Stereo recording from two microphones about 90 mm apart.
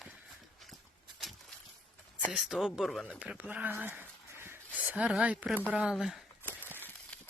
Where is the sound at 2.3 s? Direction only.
5° right (ahead or behind).